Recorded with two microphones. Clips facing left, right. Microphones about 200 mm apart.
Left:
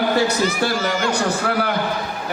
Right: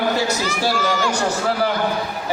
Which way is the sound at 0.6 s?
55° left (ahead or behind).